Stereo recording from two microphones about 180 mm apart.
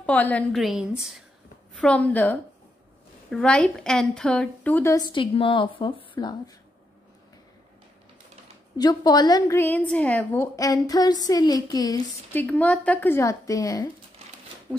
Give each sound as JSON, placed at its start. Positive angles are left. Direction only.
{"t": 0.0, "sound": "a woman's voice", "side_deg": 10}
{"t": 8.7, "sound": "a woman's voice", "side_deg": 20}